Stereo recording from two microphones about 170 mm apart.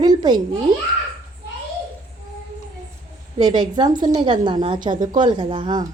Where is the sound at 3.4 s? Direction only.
25° right (ahead or behind).